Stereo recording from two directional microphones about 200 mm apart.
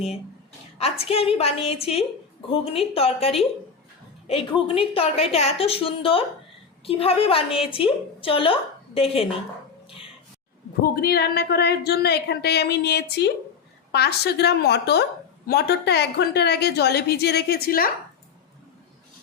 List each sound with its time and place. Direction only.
0.8 s a woman's voice: 30° left (ahead or behind)
11.0 s a woman's voice: 50° left (ahead or behind)